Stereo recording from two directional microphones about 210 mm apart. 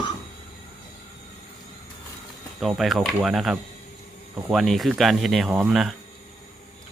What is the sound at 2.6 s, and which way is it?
Speech, centre (ahead or behind).